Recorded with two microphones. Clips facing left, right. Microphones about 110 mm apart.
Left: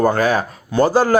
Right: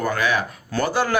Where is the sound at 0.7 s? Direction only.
20° left (ahead or behind).